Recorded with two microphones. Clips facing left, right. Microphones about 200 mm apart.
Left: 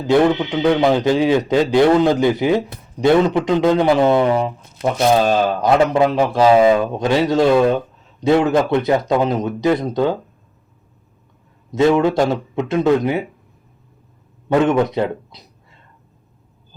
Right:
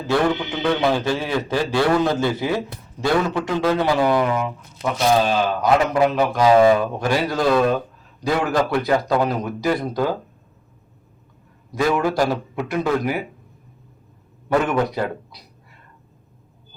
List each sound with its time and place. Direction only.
0.1 s a man's voice: 20° left (ahead or behind)
4.8 s speech: 45° left (ahead or behind)
5.6 s a man's voice: 25° left (ahead or behind)
11.7 s a man's voice: 25° left (ahead or behind)
14.6 s a man's voice: 20° left (ahead or behind)